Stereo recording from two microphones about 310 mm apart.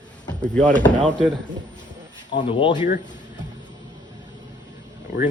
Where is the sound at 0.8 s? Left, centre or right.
Centre.